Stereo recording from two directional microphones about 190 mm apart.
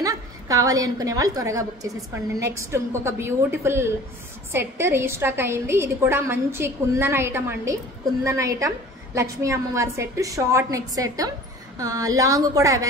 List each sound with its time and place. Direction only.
0.0 s a woman's voice: 20° right (ahead or behind)